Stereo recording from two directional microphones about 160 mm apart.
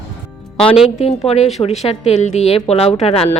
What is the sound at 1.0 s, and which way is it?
A woman's voice, 40° left (ahead or behind).